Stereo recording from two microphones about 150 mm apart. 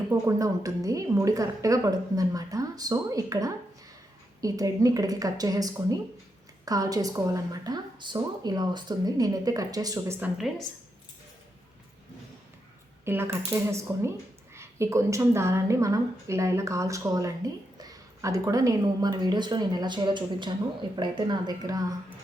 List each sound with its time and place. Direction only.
0.1 s a woman's voice: 20° right (ahead or behind)
10.2 s speech: 5° right (ahead or behind)
13.1 s a woman's voice: 15° right (ahead or behind)